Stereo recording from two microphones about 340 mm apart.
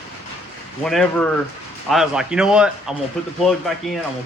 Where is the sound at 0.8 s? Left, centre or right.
Centre.